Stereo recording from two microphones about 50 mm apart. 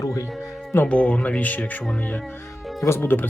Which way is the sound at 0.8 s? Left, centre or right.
Left.